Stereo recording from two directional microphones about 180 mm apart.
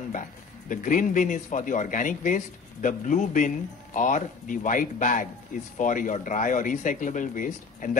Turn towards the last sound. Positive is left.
turn(degrees=45)  # may be behind; listen again after turning